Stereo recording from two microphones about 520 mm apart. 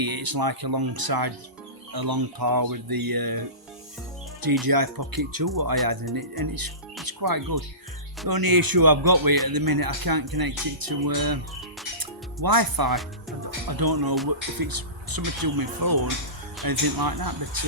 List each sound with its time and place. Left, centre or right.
0.0 s speech: right
4.6 s speech: right
11.9 s music: right
13.7 s speech: right